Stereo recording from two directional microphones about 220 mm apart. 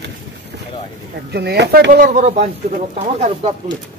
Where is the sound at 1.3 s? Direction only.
45° right (ahead or behind); by 3.5 s 30° right (ahead or behind).